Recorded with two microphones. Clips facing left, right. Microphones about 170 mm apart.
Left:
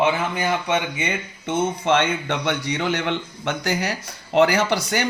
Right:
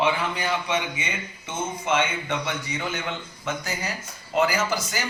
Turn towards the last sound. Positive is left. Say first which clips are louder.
# left 5 dB
turn(degrees=70)  # may be behind; listen again after turning